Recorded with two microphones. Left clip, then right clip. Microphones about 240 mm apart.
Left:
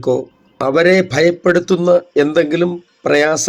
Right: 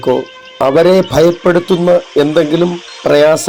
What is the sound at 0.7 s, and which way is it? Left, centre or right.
Speech, centre.